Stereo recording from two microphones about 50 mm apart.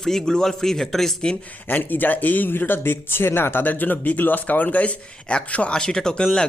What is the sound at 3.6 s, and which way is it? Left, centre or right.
A man's voice, left.